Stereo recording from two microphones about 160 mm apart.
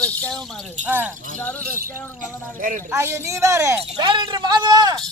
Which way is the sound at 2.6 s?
55° right (ahead or behind).